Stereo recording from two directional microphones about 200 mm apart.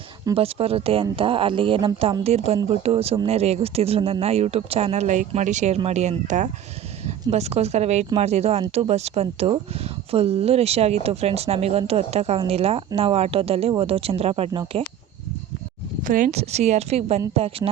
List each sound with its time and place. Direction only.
0.3 s a woman's voice: 30° right (ahead or behind)
16.0 s a woman's voice: 40° right (ahead or behind)